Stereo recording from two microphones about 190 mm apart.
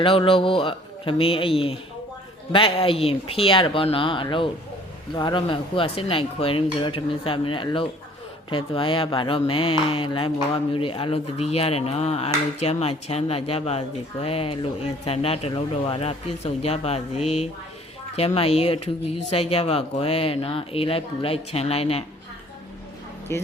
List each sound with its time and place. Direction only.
0.0 s speech: 30° left (ahead or behind)
23.3 s speech: 15° left (ahead or behind)